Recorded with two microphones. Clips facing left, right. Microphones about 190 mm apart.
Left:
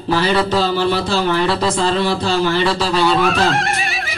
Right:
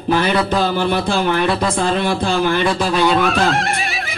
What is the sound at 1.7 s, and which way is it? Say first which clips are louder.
Speech: left 1 dB; 55° right (ahead or behind).